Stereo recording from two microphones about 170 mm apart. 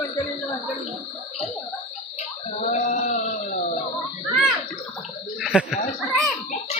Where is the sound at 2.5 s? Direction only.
40° left (ahead or behind).